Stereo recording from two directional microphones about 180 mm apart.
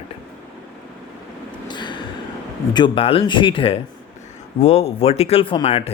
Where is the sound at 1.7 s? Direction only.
25° left (ahead or behind).